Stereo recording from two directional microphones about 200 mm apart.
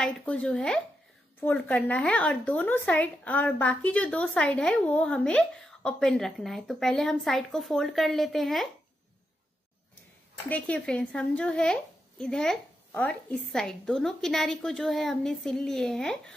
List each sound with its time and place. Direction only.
0.0 s speech: 5° left (ahead or behind)
10.5 s speech: 5° left (ahead or behind)